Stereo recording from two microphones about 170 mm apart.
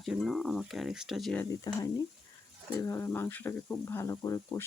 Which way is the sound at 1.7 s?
20° left (ahead or behind).